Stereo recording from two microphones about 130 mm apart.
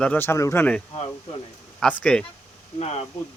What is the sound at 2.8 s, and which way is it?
Speech, 55° left (ahead or behind).